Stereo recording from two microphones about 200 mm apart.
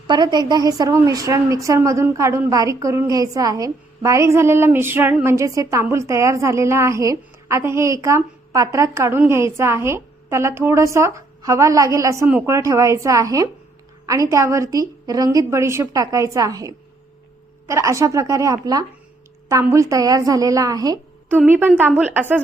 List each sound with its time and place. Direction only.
0.1 s a woman's voice: 20° right (ahead or behind)